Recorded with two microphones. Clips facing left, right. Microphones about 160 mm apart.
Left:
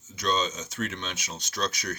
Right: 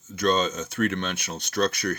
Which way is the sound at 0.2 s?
55° right (ahead or behind).